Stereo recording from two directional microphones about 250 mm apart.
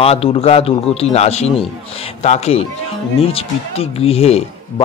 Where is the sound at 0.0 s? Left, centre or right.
Left.